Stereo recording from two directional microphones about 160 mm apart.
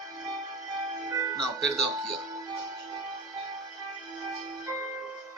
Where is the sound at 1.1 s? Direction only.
20° right (ahead or behind).